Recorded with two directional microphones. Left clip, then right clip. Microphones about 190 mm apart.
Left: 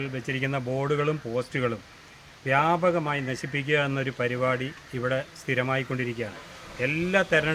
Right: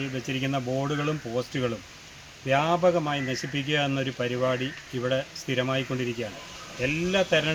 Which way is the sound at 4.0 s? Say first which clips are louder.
Even; 15° left (ahead or behind).